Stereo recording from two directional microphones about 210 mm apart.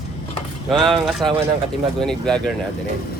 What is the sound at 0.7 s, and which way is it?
Speech, centre (ahead or behind).